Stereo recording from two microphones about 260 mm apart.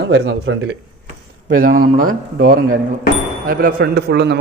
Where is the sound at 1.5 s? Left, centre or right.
Right.